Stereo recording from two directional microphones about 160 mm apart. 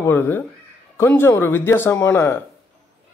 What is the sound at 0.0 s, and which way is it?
Speech, 10° left (ahead or behind).